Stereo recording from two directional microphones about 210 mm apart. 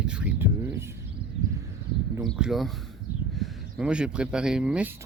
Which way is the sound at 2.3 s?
Centre (ahead or behind).